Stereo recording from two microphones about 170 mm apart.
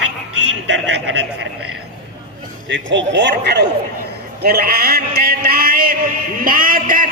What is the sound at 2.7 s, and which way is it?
Speech, 90° right.